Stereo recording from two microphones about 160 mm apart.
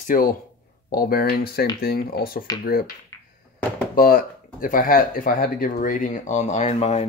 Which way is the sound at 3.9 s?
65° left (ahead or behind).